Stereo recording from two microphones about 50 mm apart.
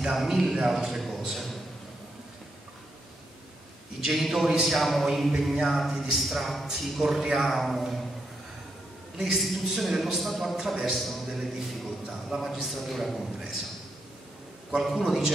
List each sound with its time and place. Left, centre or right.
0.0 s a man's voice: centre
0.7 s a sound: centre
4.1 s a man's voice: centre
9.1 s a man's voice: centre
14.8 s a man's voice: centre